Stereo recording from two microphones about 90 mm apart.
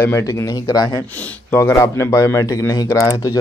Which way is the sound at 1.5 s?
30° left (ahead or behind).